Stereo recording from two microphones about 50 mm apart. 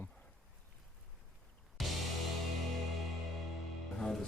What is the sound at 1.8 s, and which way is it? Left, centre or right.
Music, centre.